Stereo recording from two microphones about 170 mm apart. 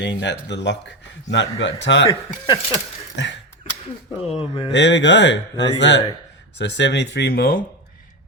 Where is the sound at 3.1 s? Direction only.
90° left.